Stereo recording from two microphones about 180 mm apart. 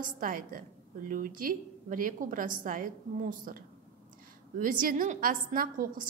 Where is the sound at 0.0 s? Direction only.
50° right (ahead or behind).